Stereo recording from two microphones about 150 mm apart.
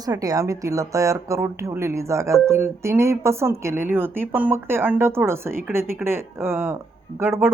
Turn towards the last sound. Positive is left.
turn(degrees=-15)  # may be behind; listen again after turning